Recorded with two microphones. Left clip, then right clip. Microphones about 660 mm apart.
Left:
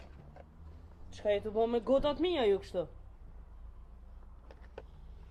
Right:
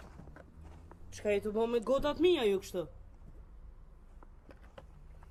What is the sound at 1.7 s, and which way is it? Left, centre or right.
Speech, centre.